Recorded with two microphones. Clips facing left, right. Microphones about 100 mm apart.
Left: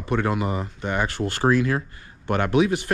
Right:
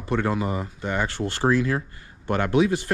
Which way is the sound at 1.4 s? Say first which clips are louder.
Left 1 dB; 60° left (ahead or behind).